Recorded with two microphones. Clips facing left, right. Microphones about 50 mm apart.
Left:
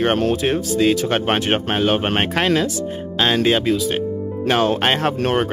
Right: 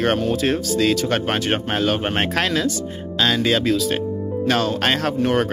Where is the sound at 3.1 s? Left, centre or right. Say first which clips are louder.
Left 2 dB; left.